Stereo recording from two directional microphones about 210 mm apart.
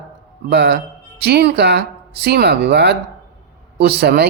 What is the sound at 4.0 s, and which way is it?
Speech, 50° right (ahead or behind).